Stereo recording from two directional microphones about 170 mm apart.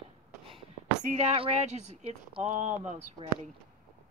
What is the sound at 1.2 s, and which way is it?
Speech, 35° right (ahead or behind).